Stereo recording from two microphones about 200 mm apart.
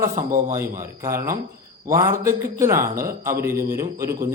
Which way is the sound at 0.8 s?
15° right (ahead or behind).